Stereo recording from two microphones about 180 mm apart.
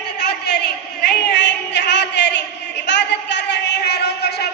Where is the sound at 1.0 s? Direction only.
70° left (ahead or behind).